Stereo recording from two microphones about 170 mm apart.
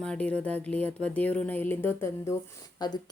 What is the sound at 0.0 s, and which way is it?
Speech, 5° left (ahead or behind).